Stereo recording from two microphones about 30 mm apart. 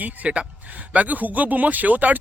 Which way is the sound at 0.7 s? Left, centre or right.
Right.